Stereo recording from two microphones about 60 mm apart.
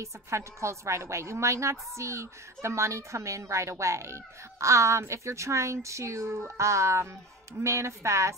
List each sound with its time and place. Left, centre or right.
0.0 s a woman's voice: right